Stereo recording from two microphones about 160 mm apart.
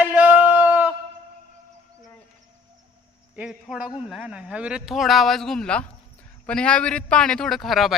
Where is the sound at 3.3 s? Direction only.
5° right (ahead or behind).